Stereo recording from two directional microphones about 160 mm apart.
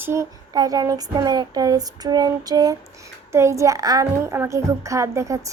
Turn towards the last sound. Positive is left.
turn(degrees=-20)  # may be behind; listen again after turning